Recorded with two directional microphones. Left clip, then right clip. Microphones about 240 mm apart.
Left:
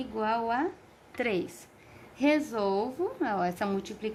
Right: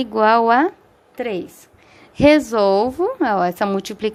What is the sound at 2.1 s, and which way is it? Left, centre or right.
A woman's voice, right.